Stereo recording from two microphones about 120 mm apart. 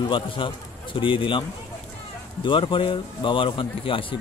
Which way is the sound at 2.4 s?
45° left (ahead or behind).